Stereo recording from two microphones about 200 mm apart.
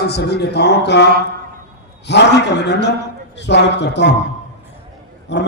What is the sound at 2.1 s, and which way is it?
A man's voice, 60° left (ahead or behind).